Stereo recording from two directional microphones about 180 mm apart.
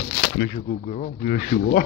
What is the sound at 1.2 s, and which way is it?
Speech, 50° left (ahead or behind).